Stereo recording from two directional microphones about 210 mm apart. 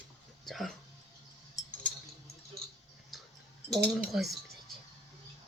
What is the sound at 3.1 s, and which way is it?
Tick-tock, centre (ahead or behind).